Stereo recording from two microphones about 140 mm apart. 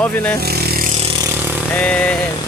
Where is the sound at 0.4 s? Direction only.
90° right.